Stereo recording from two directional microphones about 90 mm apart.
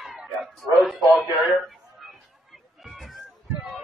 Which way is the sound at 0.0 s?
5° right (ahead or behind).